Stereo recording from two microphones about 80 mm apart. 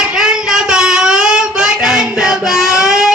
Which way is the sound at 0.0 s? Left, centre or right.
Centre.